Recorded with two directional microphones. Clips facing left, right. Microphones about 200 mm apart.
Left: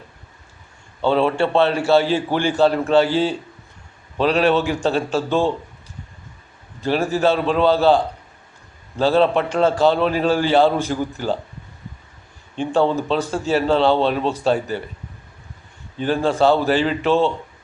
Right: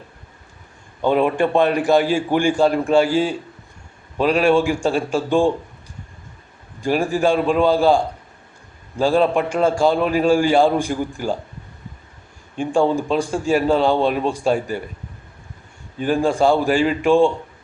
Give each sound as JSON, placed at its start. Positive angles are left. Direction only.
{"t": 1.0, "sound": "speech", "side_deg": -15}
{"t": 6.8, "sound": "speech", "side_deg": -10}
{"t": 12.5, "sound": "speech", "side_deg": -10}
{"t": 16.0, "sound": "speech", "side_deg": -10}